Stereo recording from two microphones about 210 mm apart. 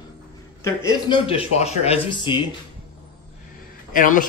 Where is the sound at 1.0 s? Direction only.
25° left (ahead or behind).